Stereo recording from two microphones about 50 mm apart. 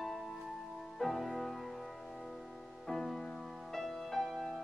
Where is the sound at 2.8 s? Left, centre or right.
Centre.